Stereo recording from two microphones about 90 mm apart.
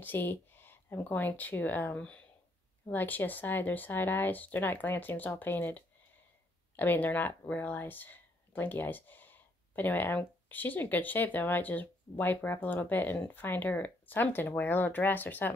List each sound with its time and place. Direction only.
0.0 s speech: 25° left (ahead or behind)